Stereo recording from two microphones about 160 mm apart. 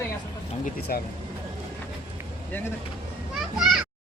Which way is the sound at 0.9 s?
65° left (ahead or behind).